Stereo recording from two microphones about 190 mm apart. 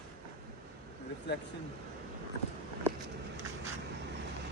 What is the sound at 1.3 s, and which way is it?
Speech, 60° left (ahead or behind).